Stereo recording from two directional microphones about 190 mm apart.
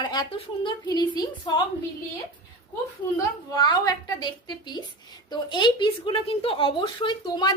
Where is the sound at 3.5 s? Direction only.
20° left (ahead or behind).